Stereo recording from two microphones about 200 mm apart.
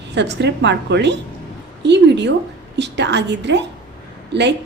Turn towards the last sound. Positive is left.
turn(degrees=-60)  # may be behind; listen again after turning